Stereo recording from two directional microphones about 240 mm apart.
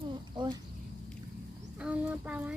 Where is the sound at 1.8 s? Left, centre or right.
Centre.